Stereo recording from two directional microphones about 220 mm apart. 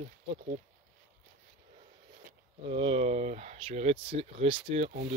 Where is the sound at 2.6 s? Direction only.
25° right (ahead or behind).